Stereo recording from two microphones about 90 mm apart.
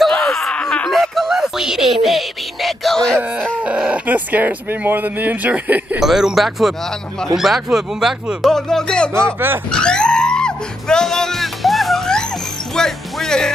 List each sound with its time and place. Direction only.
0.2 s a sound: 5° left (ahead or behind)
3.6 s speech: 10° right (ahead or behind)
5.9 s speech: 5° right (ahead or behind)
9.1 s speech: 30° right (ahead or behind)
9.7 s music: 10° left (ahead or behind)